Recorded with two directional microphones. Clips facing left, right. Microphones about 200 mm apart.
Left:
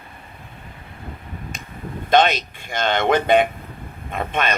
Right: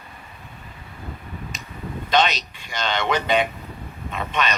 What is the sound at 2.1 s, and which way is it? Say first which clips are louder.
Speech: left 4 dB; 50° left (ahead or behind).